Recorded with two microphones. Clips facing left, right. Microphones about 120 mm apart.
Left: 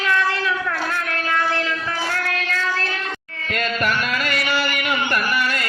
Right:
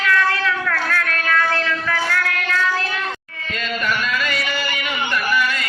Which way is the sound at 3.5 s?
55° left (ahead or behind).